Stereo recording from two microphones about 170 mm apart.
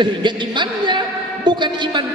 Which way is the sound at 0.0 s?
25° right (ahead or behind).